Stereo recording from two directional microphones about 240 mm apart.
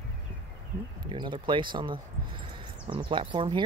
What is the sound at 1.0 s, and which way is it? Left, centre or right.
Speech, centre.